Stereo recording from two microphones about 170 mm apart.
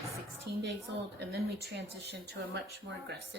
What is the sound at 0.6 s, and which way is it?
A woman's voice, 85° right.